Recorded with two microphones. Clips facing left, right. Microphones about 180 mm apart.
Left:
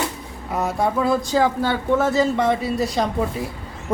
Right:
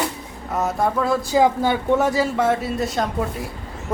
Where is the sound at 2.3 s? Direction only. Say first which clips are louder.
Even; 5° right (ahead or behind).